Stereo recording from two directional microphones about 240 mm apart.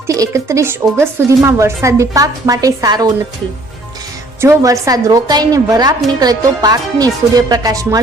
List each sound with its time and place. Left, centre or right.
0.1 s a woman's voice: centre
4.4 s a woman's voice: centre